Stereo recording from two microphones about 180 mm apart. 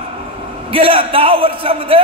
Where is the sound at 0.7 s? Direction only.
30° right (ahead or behind).